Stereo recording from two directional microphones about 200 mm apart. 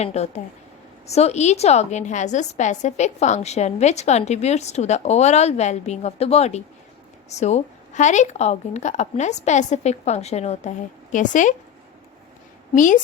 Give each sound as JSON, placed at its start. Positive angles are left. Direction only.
{"t": 0.0, "sound": "a woman's voice", "side_deg": 35}
{"t": 12.7, "sound": "a woman's voice", "side_deg": 40}